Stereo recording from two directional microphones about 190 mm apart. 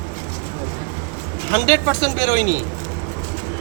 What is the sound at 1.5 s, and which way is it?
Speech, 20° left (ahead or behind).